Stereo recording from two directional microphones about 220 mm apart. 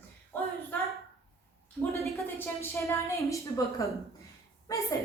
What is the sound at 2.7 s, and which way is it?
A woman's voice, 15° left (ahead or behind).